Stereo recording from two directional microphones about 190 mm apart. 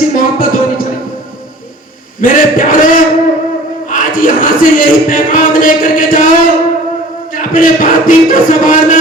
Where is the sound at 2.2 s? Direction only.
45° left (ahead or behind).